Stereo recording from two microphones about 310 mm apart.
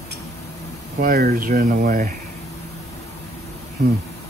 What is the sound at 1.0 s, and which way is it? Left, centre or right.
Speech, right.